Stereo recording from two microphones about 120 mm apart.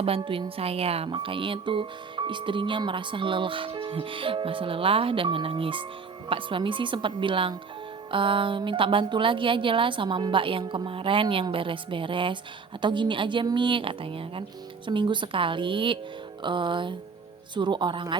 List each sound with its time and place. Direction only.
0.0 s speech: 50° right (ahead or behind)